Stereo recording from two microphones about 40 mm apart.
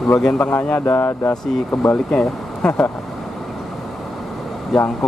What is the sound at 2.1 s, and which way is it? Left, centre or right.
Speech, left.